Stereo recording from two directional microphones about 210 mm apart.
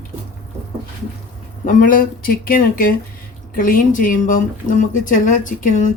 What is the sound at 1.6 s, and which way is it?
Speech, 40° left (ahead or behind).